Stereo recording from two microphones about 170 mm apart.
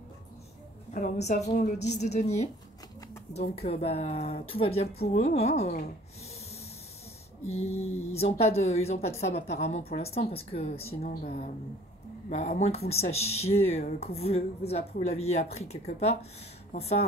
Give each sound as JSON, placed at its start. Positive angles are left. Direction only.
{"t": 0.9, "sound": "a woman's voice", "side_deg": 45}
{"t": 7.4, "sound": "a woman's voice", "side_deg": 40}
{"t": 11.2, "sound": "speech", "side_deg": 55}
{"t": 12.3, "sound": "a woman's voice", "side_deg": 40}